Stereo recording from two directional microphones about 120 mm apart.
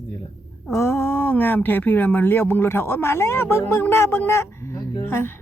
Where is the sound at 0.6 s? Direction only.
20° left (ahead or behind).